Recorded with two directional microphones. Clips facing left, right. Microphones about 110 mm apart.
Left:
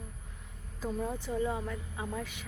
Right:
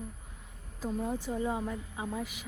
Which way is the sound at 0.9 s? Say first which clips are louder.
Right 1 dB; 10° right (ahead or behind).